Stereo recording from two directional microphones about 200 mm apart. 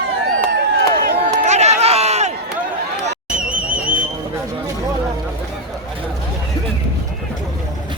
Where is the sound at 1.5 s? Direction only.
35° right (ahead or behind).